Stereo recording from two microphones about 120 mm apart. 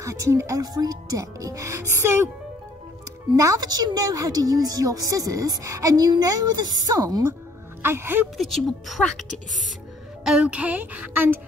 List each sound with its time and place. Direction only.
0.0 s speech: 25° right (ahead or behind)
3.3 s a woman's voice: 30° right (ahead or behind)
7.8 s speech: 20° right (ahead or behind)
8.4 s speech: centre (ahead or behind)
10.2 s speech: 5° right (ahead or behind)